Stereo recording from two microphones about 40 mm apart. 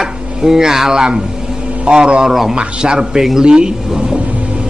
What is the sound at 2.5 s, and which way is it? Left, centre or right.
Speech, centre.